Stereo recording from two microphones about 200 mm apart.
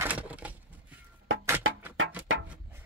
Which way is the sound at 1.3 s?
85° right.